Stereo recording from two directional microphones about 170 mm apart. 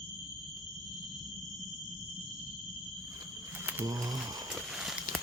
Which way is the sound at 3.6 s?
15° right (ahead or behind).